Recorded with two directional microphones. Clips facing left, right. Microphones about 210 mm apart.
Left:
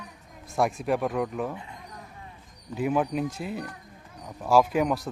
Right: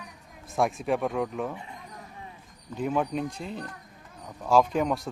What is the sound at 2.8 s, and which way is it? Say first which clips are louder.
Speech: left 2 dB; 5° left (ahead or behind).